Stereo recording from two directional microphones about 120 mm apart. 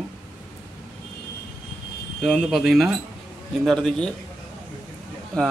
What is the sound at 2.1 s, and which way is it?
Speech, 5° left (ahead or behind).